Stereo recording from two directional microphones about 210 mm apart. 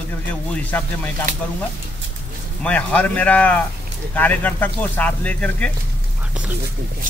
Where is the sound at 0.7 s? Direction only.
10° left (ahead or behind).